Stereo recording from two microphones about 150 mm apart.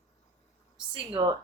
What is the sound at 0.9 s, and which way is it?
Speech, 30° right (ahead or behind).